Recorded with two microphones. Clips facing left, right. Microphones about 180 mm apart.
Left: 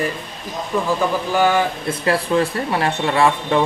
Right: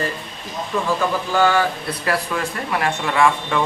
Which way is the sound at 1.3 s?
20° left (ahead or behind).